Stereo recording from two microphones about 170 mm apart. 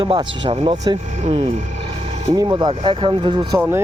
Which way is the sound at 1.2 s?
35° right (ahead or behind).